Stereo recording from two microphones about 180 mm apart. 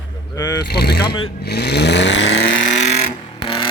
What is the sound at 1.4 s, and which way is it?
Vehicle, 65° left (ahead or behind).